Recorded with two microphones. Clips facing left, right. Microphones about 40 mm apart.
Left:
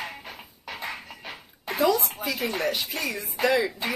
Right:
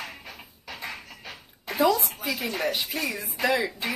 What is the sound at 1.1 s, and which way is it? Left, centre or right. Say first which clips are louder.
Dog: left 2 dB; centre.